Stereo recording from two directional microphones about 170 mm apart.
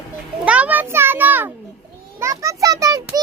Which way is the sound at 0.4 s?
10° right (ahead or behind).